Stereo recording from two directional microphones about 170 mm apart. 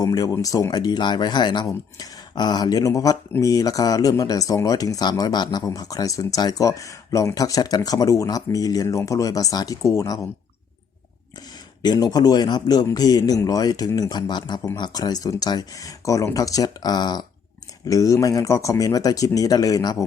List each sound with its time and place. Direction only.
0.0 s speech: 20° left (ahead or behind)
11.8 s speech: 25° left (ahead or behind)